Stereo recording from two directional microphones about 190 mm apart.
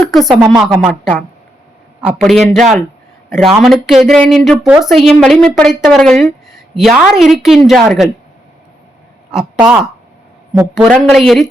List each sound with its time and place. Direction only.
0.0 s a woman's voice: centre (ahead or behind)
2.0 s a woman's voice: 5° right (ahead or behind)
9.3 s a woman's voice: 5° right (ahead or behind)